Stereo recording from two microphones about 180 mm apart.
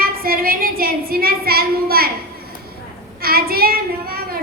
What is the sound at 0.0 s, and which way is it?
A woman's voice, 55° right (ahead or behind).